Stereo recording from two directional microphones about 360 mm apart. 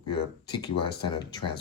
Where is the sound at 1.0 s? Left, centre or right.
Centre.